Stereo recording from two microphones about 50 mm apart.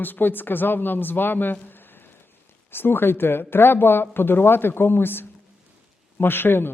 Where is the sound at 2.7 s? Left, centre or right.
Left.